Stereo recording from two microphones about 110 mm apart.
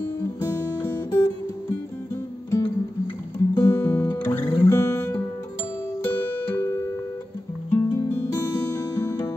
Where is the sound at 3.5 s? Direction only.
30° left (ahead or behind).